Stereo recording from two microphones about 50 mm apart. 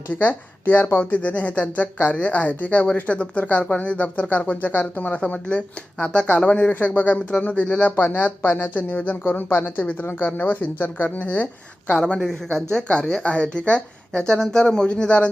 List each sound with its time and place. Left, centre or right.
0.2 s speech: left
9.6 s speech: left
11.9 s speech: left
12.3 s speech: centre